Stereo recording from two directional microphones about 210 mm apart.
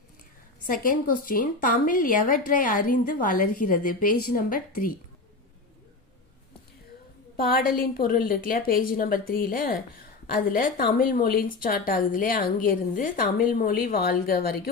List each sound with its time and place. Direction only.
0.7 s speech: 45° left (ahead or behind)
7.3 s speech: 45° left (ahead or behind)